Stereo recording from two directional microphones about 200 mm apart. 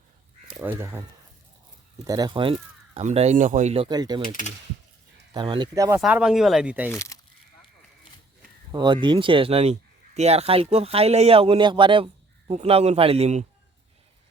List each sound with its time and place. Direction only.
0.6 s speech: 10° right (ahead or behind)
2.0 s speech: 20° right (ahead or behind)
3.8 s speech: 20° right (ahead or behind)
4.2 s speech: 40° left (ahead or behind)
5.3 s speech: 25° right (ahead or behind)
6.0 s speech: 5° right (ahead or behind)
6.9 s speech: 15° left (ahead or behind)
8.7 s speech: 20° right (ahead or behind)